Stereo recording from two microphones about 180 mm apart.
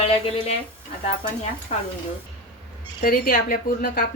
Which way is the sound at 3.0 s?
55° left (ahead or behind).